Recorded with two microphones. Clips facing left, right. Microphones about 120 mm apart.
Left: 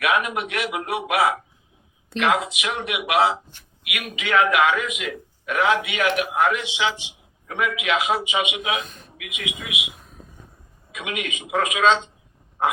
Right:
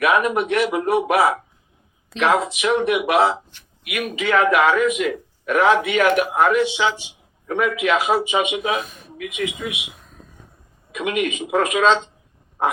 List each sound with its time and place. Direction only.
0.1 s speech: 45° right (ahead or behind)
2.1 s speech: centre (ahead or behind)
2.6 s a man's voice: 45° right (ahead or behind)
10.9 s a man's voice: 45° right (ahead or behind)